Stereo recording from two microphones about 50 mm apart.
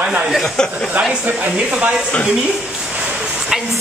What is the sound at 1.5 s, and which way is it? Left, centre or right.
Speech, centre.